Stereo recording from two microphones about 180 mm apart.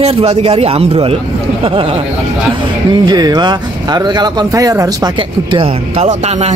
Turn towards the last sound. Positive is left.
turn(degrees=-35)  # may be behind; listen again after turning